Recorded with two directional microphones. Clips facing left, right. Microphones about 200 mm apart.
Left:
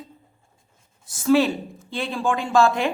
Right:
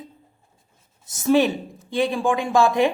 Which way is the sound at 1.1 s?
20° right (ahead or behind).